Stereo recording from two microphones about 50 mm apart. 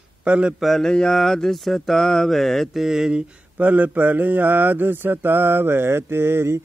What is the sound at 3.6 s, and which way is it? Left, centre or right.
Mantra, right.